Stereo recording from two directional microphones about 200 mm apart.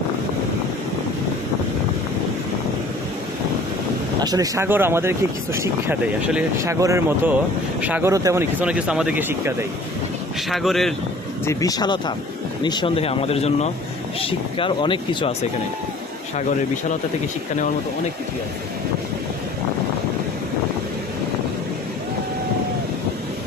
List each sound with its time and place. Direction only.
4.2 s speech: 20° right (ahead or behind); by 10.9 s centre (ahead or behind)
11.4 s speech: 20° left (ahead or behind)